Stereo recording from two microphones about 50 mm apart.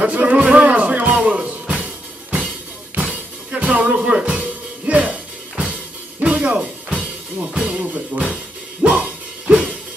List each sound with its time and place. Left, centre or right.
0.0 s music: right
3.0 s music: right
4.8 s music: right